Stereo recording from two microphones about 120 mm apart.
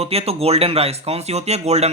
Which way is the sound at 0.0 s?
55° right (ahead or behind).